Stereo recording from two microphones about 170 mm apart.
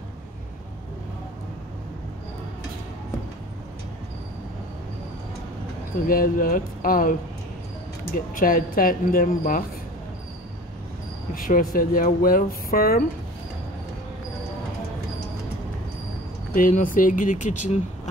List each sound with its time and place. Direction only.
6.0 s speech: 55° left (ahead or behind)
11.3 s speech: 55° left (ahead or behind)
16.5 s speech: 55° left (ahead or behind)